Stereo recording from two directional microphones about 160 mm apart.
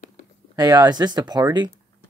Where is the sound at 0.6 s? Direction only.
20° right (ahead or behind).